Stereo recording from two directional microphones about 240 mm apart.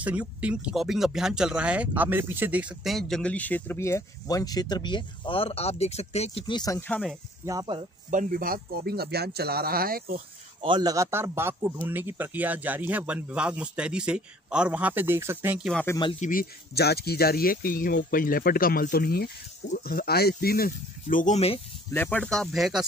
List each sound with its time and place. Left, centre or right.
0.0 s speech: centre
7.4 s speech: centre
8.1 s speech: right
10.6 s speech: centre
16.0 s speech: left
16.3 s speech: left
21.9 s speech: centre